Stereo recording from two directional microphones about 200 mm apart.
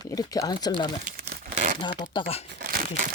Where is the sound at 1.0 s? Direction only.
50° right (ahead or behind).